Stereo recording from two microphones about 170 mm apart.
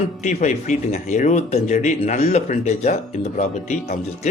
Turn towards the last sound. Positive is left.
turn(degrees=45)  # may be behind; listen again after turning